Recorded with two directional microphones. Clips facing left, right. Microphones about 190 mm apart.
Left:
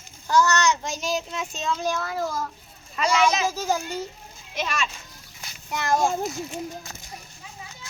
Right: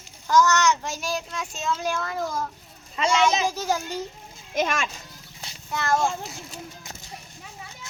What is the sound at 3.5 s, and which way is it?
Speech, 10° left (ahead or behind).